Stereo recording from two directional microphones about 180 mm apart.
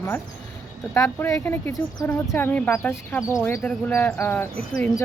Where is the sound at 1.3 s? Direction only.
10° left (ahead or behind).